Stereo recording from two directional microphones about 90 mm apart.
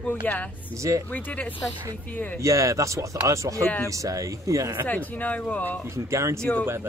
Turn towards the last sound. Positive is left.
turn(degrees=10)  # may be behind; listen again after turning